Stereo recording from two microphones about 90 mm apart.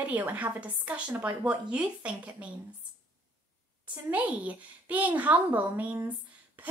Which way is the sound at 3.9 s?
15° right (ahead or behind).